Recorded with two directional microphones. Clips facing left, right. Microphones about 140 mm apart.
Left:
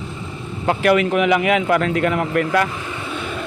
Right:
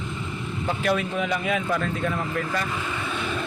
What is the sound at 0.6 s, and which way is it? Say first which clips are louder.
A man's voice: left 9 dB; 75° left (ahead or behind).